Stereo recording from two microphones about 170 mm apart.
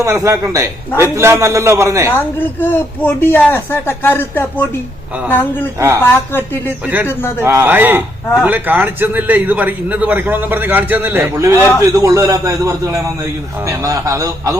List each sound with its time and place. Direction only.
0.0 s a man's voice: 20° right (ahead or behind)
2.0 s speech: 10° left (ahead or behind)
6.8 s a man's voice: 10° right (ahead or behind)
7.1 s speech: 15° left (ahead or behind)
7.4 s a man's voice: 15° right (ahead or behind)